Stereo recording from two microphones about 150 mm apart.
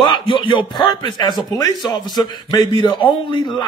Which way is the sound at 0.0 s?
35° left (ahead or behind).